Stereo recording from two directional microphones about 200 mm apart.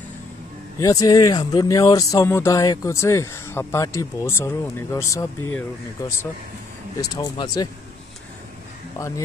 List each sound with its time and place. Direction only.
0.7 s speech: 15° left (ahead or behind)
7.0 s speech: 15° left (ahead or behind)
8.9 s speech: 15° left (ahead or behind)